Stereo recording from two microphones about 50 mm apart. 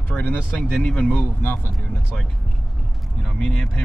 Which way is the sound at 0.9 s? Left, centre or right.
Left.